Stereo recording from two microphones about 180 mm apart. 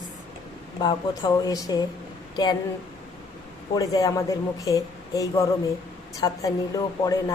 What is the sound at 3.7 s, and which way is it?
A woman's voice, 20° left (ahead or behind).